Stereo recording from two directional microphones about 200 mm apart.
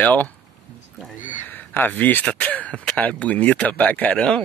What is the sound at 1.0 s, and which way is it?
Speech, 10° right (ahead or behind).